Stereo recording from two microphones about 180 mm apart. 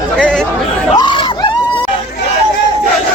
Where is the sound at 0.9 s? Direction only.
25° left (ahead or behind).